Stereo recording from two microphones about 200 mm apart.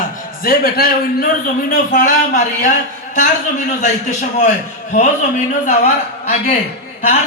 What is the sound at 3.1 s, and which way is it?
Speech, 40° left (ahead or behind).